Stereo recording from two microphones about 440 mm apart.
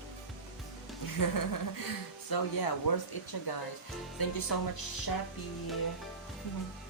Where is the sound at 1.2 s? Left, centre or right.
Left.